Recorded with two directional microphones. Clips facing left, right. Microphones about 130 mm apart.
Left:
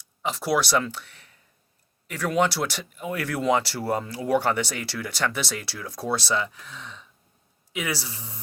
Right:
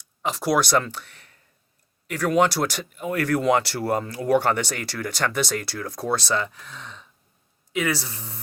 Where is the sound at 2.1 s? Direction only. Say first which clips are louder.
Right 3 dB; 45° right (ahead or behind).